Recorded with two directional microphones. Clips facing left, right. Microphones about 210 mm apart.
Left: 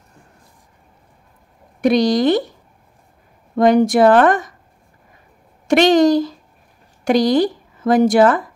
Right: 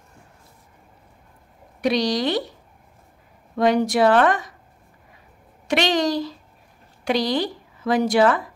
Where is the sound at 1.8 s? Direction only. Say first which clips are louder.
Left 7 dB; 50° left (ahead or behind).